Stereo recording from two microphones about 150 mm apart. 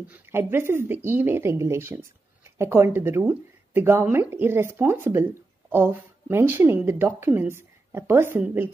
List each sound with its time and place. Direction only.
0.1 s speech: 15° right (ahead or behind)